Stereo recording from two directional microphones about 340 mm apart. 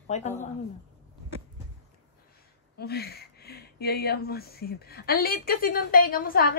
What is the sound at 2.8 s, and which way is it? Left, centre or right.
Speech, left.